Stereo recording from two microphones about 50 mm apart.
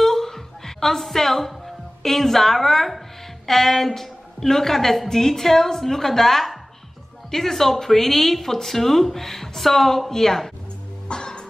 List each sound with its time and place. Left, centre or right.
0.0 s music: centre
2.0 s a woman's voice: centre
11.1 s music: centre